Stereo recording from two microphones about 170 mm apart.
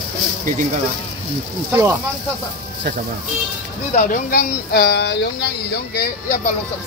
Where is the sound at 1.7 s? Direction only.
15° right (ahead or behind).